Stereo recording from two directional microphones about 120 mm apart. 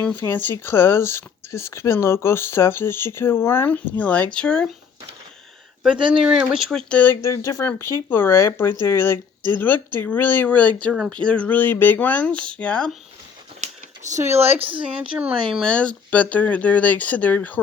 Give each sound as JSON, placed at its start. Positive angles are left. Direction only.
{"t": 0.0, "sound": "speech", "side_deg": 15}
{"t": 6.0, "sound": "speech", "side_deg": -45}
{"t": 6.2, "sound": "speech", "side_deg": -5}
{"t": 6.9, "sound": "speech", "side_deg": 15}
{"t": 14.3, "sound": "speech", "side_deg": -55}
{"t": 15.2, "sound": "speech", "side_deg": -10}
{"t": 15.6, "sound": "speech", "side_deg": 10}